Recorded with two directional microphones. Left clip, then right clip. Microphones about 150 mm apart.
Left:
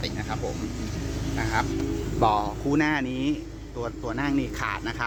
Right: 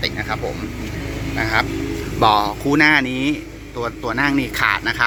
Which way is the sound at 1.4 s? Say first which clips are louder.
Right 8 dB; 5° right (ahead or behind).